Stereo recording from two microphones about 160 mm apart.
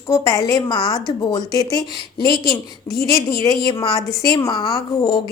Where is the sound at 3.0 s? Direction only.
20° left (ahead or behind).